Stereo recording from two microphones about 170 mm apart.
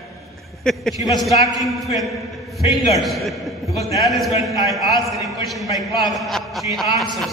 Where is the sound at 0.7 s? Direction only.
5° left (ahead or behind).